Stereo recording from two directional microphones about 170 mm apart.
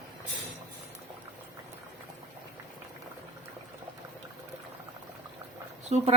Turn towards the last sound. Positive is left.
turn(degrees=-40)  # may be behind; listen again after turning